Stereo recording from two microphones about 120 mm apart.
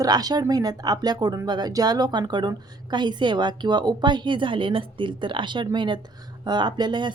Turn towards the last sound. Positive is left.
turn(degrees=-40)  # may be behind; listen again after turning